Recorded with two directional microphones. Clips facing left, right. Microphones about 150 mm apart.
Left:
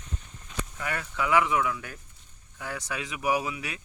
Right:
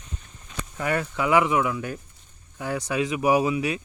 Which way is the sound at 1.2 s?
20° right (ahead or behind).